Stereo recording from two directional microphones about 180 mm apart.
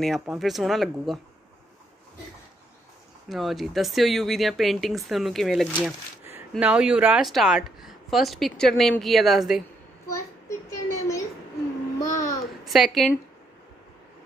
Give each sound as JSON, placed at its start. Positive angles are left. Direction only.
{"t": 0.0, "sound": "speech", "side_deg": 0}
{"t": 3.3, "sound": "speech", "side_deg": 0}
{"t": 5.9, "sound": "a sound", "side_deg": -10}
{"t": 6.5, "sound": "speech", "side_deg": -5}
{"t": 10.1, "sound": "a sound", "side_deg": 15}
{"t": 12.0, "sound": "babbling", "side_deg": 20}
{"t": 12.6, "sound": "speech", "side_deg": 0}